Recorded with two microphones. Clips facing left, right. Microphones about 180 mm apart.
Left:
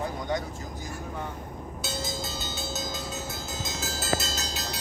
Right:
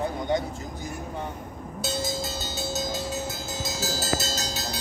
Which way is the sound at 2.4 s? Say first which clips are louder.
Right 4 dB; 40° right (ahead or behind).